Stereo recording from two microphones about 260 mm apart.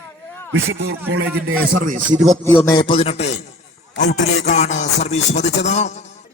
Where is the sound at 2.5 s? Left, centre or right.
Centre.